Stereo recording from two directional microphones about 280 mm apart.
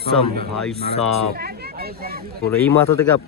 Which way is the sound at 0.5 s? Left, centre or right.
Centre.